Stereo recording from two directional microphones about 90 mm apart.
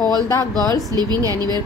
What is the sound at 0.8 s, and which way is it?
Speech, 45° right (ahead or behind).